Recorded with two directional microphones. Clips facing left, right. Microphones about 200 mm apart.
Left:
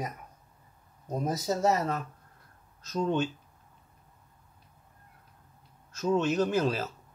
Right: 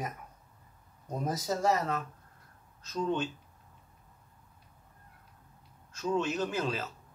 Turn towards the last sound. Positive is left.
turn(degrees=40)  # may be behind; listen again after turning